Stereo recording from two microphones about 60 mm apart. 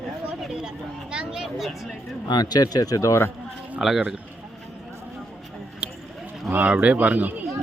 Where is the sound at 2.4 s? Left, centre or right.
Left.